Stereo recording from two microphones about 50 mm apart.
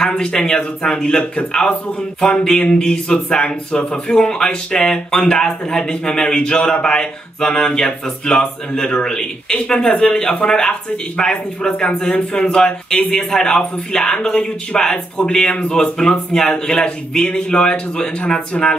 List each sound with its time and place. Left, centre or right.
0.0 s speech: centre
2.4 s speech: centre